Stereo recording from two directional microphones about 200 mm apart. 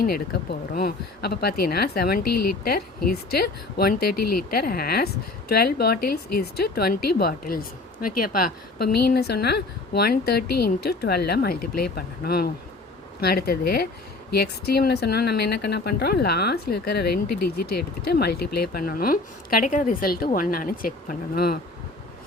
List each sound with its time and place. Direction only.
0.7 s speech: 50° left (ahead or behind)